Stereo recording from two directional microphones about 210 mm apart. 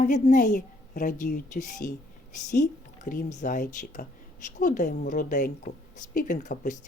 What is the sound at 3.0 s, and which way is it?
A woman's voice, 40° left (ahead or behind).